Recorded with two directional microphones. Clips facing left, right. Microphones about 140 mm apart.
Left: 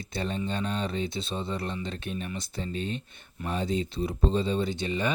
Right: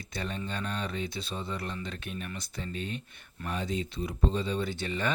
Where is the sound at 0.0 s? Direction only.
30° left (ahead or behind).